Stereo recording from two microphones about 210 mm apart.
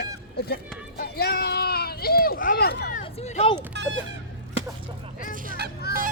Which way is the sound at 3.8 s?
55° right (ahead or behind).